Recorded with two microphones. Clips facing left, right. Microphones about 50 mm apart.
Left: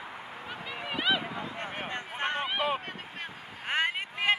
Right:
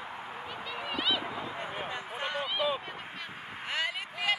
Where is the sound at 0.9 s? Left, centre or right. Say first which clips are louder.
Left 3 dB; centre.